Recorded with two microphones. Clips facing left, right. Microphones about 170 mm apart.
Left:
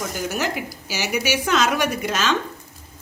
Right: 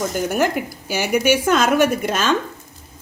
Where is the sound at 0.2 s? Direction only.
55° right (ahead or behind).